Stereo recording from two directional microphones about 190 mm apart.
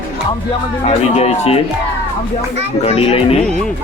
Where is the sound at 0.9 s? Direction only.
35° left (ahead or behind).